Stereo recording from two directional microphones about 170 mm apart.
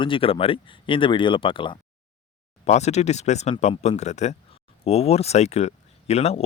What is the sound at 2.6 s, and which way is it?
Speech, 40° left (ahead or behind).